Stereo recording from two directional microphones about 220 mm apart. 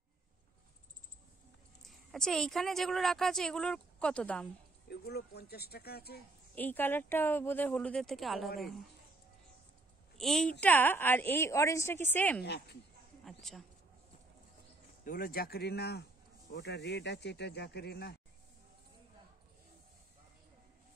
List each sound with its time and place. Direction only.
1.8 s a woman's voice: centre (ahead or behind)
4.8 s speech: 45° left (ahead or behind)
6.5 s speech: 10° left (ahead or behind)
10.1 s a woman's voice: centre (ahead or behind)
12.4 s speech: 50° left (ahead or behind)
13.2 s a woman's voice: centre (ahead or behind)
15.0 s speech: 40° left (ahead or behind)